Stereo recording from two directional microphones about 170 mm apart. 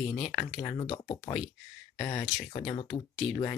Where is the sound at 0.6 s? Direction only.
35° left (ahead or behind).